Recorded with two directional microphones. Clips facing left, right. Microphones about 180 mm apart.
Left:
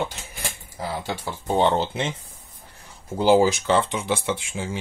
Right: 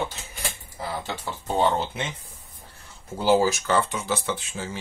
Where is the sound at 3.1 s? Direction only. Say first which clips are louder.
Left 3 dB; 15° left (ahead or behind).